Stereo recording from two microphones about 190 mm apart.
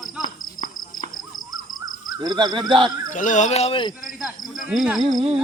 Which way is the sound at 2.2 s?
25° right (ahead or behind).